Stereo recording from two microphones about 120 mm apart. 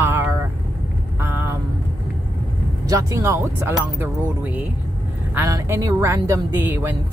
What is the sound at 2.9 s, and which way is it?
Speech, 25° right (ahead or behind).